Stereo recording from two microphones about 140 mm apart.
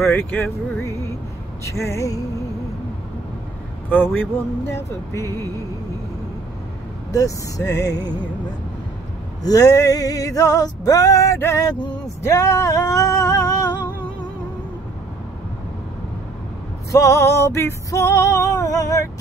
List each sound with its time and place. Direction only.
0.0 s speech: 15° left (ahead or behind)
1.6 s female singing: 20° left (ahead or behind)
3.9 s music: 15° left (ahead or behind)
7.1 s female singing: 25° left (ahead or behind)
9.4 s music: 25° left (ahead or behind)
16.9 s female singing: 20° left (ahead or behind)